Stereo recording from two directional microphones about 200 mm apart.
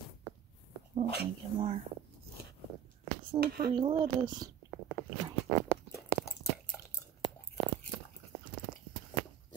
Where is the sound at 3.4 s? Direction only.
50° right (ahead or behind).